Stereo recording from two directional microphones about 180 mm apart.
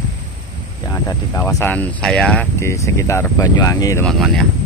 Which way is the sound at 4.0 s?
Centre (ahead or behind).